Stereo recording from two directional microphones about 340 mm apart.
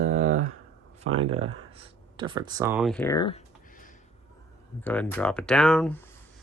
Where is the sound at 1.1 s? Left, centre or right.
Right.